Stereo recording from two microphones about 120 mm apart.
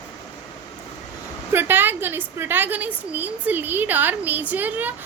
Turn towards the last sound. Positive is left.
turn(degrees=-15)  # may be behind; listen again after turning